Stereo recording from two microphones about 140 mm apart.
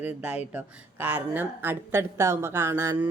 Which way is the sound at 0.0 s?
10° right (ahead or behind).